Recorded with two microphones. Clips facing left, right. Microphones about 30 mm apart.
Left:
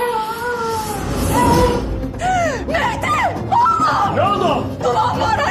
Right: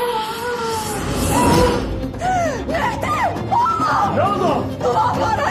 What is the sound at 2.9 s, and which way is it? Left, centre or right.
Music, left.